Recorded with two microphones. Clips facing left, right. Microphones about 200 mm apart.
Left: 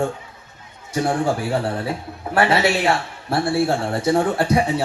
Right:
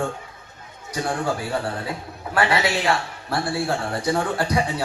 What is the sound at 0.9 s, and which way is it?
A man's voice, 25° left (ahead or behind).